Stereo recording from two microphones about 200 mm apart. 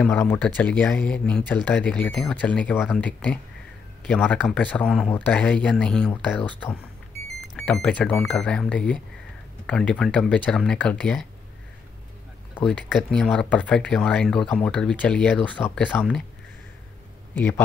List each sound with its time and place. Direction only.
0.0 s speech: 5° left (ahead or behind)
7.5 s speech: 5° left (ahead or behind)
12.5 s speech: 5° left (ahead or behind)